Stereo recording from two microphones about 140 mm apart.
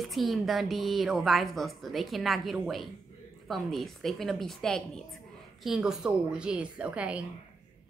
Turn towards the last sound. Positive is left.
turn(degrees=-10)  # may be behind; listen again after turning